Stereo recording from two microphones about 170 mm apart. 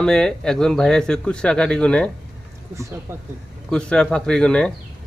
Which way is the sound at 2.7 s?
15° right (ahead or behind).